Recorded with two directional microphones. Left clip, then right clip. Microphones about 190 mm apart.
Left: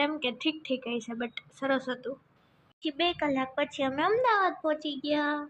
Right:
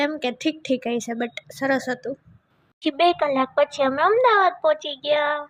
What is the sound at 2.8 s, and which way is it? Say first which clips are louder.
A woman's voice: right 10 dB; 40° right (ahead or behind).